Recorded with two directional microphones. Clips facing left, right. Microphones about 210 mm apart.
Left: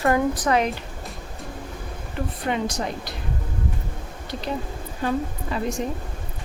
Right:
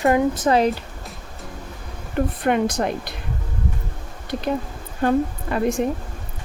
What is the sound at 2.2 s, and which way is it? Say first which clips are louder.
Speech: right 6 dB; 55° right (ahead or behind).